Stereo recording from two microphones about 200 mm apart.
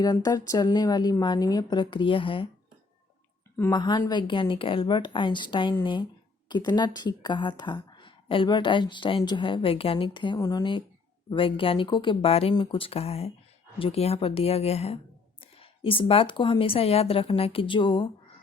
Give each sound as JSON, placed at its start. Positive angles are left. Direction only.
{"t": 0.0, "sound": "speech", "side_deg": 20}
{"t": 3.6, "sound": "speech", "side_deg": 20}